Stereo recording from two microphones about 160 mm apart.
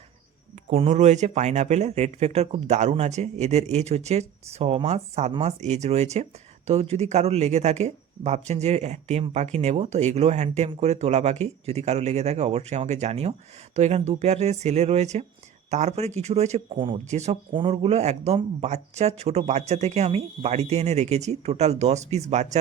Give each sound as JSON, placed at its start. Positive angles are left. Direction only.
{"t": 0.7, "sound": "speech", "side_deg": -40}
{"t": 17.5, "sound": "speech", "side_deg": -35}